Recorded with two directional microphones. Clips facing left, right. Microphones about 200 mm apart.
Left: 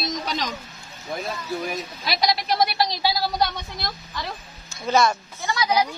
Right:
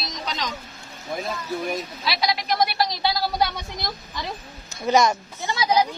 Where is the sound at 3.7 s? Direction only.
20° right (ahead or behind).